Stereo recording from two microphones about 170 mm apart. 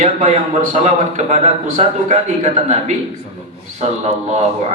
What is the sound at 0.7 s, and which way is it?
A man's voice, 45° right (ahead or behind).